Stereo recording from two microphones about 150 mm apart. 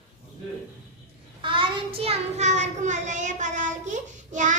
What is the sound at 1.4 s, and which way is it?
Child singing, 35° right (ahead or behind).